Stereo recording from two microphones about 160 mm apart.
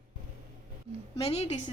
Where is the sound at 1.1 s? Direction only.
40° left (ahead or behind).